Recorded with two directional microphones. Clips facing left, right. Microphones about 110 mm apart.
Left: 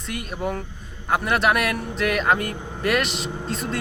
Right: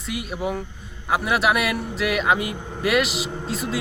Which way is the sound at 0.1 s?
5° right (ahead or behind).